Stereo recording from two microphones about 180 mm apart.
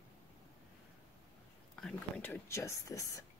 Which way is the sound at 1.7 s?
5° left (ahead or behind).